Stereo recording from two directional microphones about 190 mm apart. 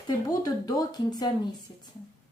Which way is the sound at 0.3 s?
20° left (ahead or behind).